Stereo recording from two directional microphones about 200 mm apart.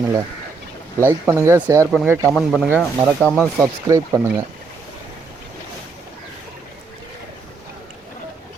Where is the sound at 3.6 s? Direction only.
15° right (ahead or behind).